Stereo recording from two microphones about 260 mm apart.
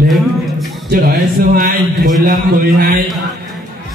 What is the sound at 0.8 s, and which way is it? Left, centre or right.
Speech, right.